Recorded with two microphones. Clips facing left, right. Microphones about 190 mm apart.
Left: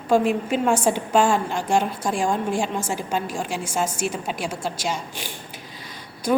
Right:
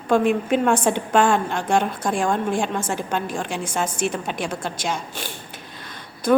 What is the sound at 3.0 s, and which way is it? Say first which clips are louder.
Speech: even; 5° left (ahead or behind).